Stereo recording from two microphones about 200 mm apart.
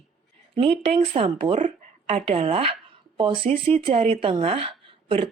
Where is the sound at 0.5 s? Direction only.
25° right (ahead or behind).